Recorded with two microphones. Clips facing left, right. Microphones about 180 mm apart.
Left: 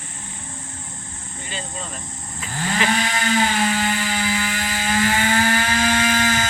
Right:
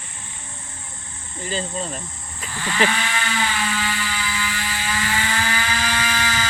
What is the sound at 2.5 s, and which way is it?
Livestock, 45° left (ahead or behind).